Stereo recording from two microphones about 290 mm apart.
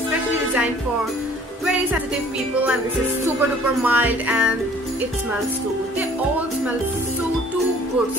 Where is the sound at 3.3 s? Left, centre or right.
Centre.